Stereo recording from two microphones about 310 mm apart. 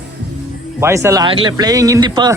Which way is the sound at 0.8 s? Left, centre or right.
Centre.